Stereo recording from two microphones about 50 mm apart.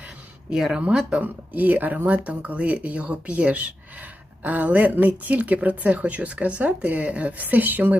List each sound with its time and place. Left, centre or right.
0.5 s speech: centre
1.2 s speech: right